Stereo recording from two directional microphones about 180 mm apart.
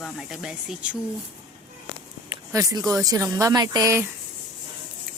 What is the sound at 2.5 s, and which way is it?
Speech, 20° right (ahead or behind).